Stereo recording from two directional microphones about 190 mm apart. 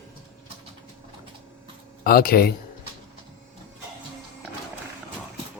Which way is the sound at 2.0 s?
50° left (ahead or behind).